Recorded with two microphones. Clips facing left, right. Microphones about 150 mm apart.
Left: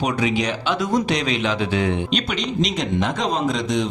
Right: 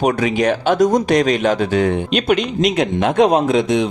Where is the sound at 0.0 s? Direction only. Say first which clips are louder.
Right 5 dB; 50° right (ahead or behind).